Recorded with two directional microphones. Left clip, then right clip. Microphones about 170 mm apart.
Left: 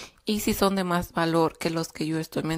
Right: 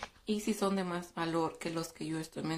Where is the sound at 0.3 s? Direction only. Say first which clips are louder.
Left 9 dB; 55° left (ahead or behind).